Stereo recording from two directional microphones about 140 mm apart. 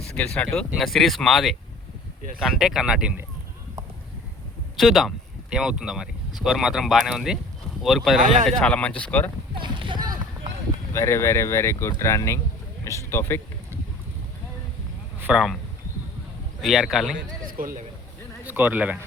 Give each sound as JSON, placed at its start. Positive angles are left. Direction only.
{"t": 0.3, "sound": "speech", "side_deg": 5}
{"t": 4.8, "sound": "speech", "side_deg": 0}
{"t": 8.2, "sound": "speech", "side_deg": -70}
{"t": 8.4, "sound": "speech", "side_deg": 5}
{"t": 9.6, "sound": "a sound", "side_deg": -35}
{"t": 10.9, "sound": "speech", "side_deg": 20}
{"t": 15.2, "sound": "speech", "side_deg": -5}
{"t": 16.6, "sound": "speech", "side_deg": -5}
{"t": 17.4, "sound": "speech", "side_deg": -80}
{"t": 18.4, "sound": "speech", "side_deg": -15}